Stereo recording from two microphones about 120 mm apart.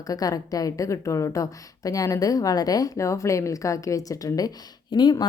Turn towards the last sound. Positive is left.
turn(degrees=35)  # may be behind; listen again after turning